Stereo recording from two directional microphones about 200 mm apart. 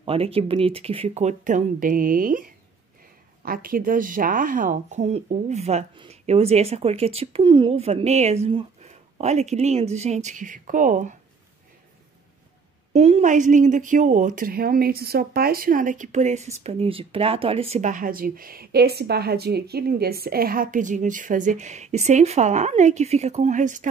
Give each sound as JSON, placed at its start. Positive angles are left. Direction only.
{"t": 0.0, "sound": "a woman's voice", "side_deg": -30}
{"t": 12.9, "sound": "a woman's voice", "side_deg": -35}